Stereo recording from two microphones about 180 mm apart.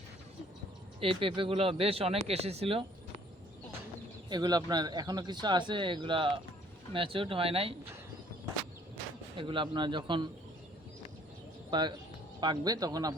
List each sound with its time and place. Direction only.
0.9 s speech: 30° right (ahead or behind)
4.3 s speech: 20° right (ahead or behind)
9.4 s speech: 25° right (ahead or behind)
11.7 s speech: 25° right (ahead or behind)